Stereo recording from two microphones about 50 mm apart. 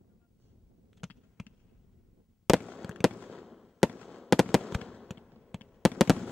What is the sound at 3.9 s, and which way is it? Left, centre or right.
Fireworks, left.